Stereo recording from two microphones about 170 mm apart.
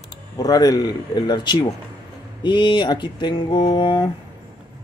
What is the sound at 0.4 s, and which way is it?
Speech, 20° left (ahead or behind).